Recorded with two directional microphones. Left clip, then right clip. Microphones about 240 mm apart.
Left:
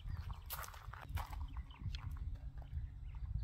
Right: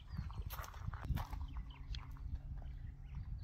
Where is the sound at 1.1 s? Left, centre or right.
Centre.